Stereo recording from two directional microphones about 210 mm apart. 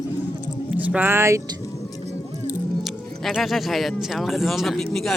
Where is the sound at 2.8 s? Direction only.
Centre (ahead or behind).